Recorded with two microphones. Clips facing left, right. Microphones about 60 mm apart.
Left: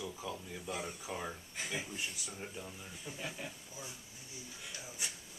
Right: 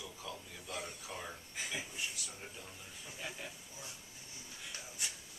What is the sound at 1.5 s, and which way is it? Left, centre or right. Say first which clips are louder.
Speech: even; centre.